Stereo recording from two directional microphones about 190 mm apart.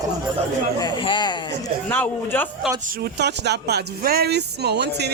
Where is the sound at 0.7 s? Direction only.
20° left (ahead or behind).